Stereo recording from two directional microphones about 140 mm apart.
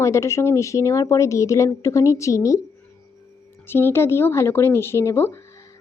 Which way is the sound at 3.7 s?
15° left (ahead or behind).